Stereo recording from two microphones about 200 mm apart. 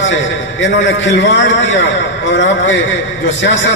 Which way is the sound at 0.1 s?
65° left (ahead or behind).